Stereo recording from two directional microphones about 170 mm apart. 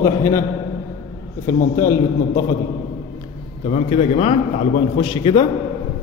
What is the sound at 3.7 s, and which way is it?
A man's voice, 35° left (ahead or behind).